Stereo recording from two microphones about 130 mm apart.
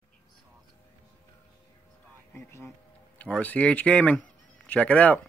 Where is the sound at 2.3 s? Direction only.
20° left (ahead or behind).